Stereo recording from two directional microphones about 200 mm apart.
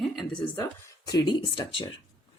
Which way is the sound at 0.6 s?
20° left (ahead or behind).